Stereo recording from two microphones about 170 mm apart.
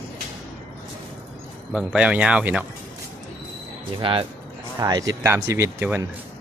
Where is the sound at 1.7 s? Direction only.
5° right (ahead or behind).